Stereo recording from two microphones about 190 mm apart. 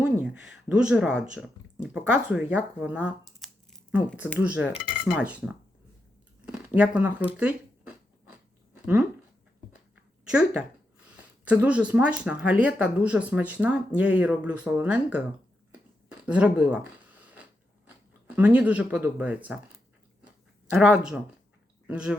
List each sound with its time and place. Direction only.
0.0 s speech: 5° right (ahead or behind)
6.7 s speech: 5° right (ahead or behind)
7.3 s a sound: 5° right (ahead or behind)
10.2 s speech: 5° right (ahead or behind)
16.2 s a sound: 5° right (ahead or behind)
17.8 s speech: 10° right (ahead or behind)
20.7 s speech: 5° right (ahead or behind)